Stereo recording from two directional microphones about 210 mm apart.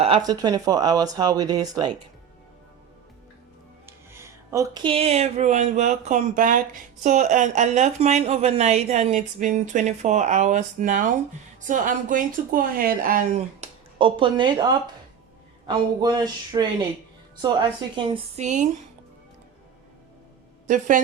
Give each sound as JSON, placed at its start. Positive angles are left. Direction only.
{"t": 0.0, "sound": "speech", "side_deg": -25}
{"t": 3.8, "sound": "a woman's voice", "side_deg": -10}
{"t": 20.7, "sound": "a woman's voice", "side_deg": -35}